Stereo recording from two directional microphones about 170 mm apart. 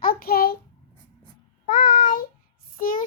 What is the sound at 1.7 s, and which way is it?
Child singing, 50° left (ahead or behind).